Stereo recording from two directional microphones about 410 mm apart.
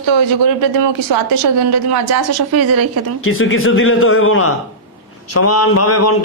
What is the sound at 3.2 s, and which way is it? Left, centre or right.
A man's voice, left.